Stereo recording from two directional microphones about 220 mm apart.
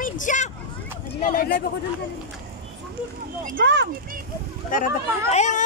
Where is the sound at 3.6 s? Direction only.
55° right (ahead or behind).